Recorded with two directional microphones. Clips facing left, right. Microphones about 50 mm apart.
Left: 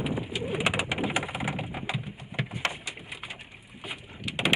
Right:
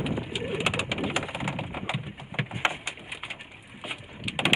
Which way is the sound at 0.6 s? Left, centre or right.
Centre.